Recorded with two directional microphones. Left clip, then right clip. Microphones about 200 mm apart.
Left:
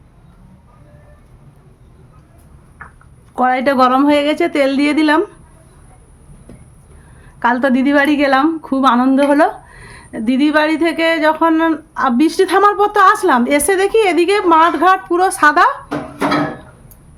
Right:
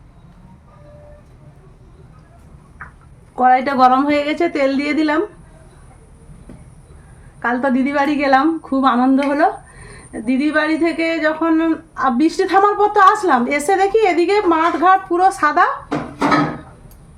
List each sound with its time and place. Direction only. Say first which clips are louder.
3.3 s a woman's voice: even; 50° left (ahead or behind)
7.3 s a woman's voice: left 4 dB; 55° left (ahead or behind)